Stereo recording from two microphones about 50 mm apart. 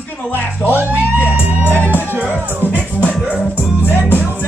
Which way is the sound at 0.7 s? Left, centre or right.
Right.